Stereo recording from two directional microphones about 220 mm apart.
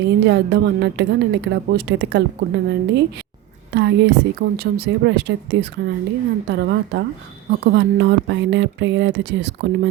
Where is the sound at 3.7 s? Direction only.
50° right (ahead or behind).